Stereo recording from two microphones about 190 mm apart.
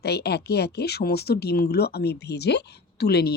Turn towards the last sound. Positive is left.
turn(degrees=60)  # may be behind; listen again after turning